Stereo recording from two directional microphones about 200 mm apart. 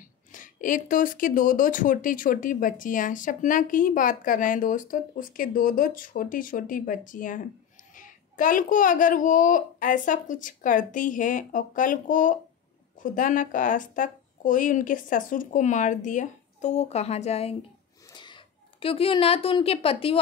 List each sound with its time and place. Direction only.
0.3 s a woman's voice: 40° left (ahead or behind)